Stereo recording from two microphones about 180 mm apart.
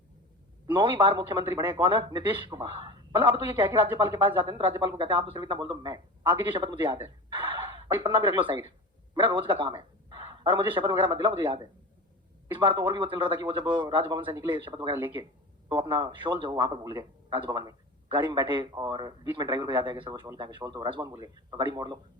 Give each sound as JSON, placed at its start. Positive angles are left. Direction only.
{"t": 0.7, "sound": "a man's voice", "side_deg": -25}